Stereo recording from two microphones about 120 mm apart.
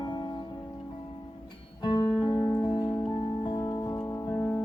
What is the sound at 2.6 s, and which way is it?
Music, 40° left (ahead or behind).